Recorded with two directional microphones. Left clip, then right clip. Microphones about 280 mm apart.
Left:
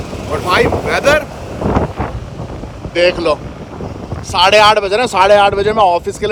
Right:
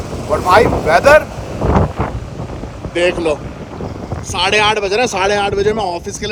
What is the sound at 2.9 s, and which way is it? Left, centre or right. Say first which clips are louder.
Speech: left 3 dB; centre.